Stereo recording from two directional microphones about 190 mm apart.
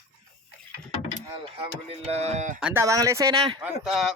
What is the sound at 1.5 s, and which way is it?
Speech, 35° right (ahead or behind).